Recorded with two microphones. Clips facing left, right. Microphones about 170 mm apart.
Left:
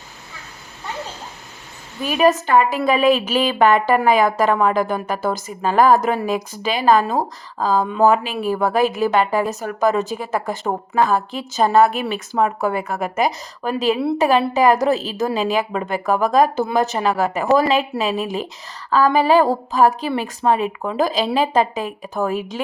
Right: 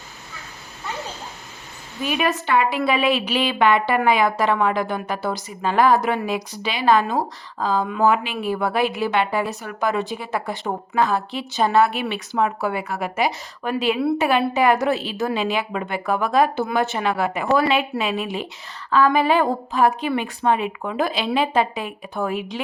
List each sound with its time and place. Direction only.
2.0 s a woman's voice: 40° left (ahead or behind)